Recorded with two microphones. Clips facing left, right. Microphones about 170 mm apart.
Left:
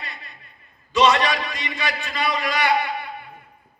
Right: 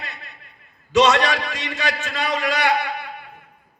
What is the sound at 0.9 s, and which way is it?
A man's voice, 75° right (ahead or behind).